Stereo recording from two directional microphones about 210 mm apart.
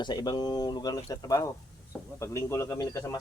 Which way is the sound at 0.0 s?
20° left (ahead or behind).